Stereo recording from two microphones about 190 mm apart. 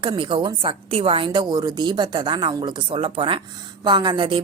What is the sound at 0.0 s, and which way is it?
A woman's voice, 25° right (ahead or behind).